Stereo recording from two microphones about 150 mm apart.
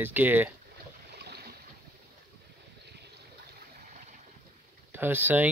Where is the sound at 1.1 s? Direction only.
90° right.